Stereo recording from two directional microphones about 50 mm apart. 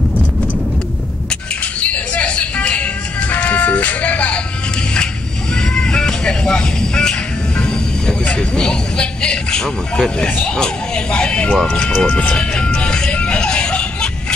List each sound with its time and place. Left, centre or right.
1.8 s music: left
5.8 s music: centre
10.6 s speech: centre
13.1 s music: left